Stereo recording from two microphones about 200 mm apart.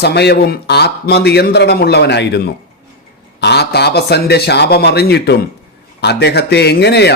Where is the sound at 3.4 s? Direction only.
55° left (ahead or behind).